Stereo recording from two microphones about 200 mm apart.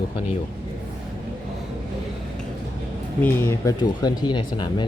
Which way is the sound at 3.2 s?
15° left (ahead or behind).